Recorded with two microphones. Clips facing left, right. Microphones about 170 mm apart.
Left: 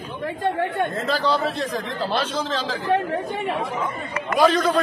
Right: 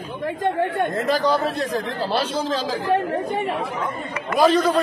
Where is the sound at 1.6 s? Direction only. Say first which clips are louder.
Right 2 dB; 40° right (ahead or behind).